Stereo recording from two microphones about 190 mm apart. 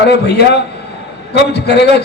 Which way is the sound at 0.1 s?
60° left (ahead or behind).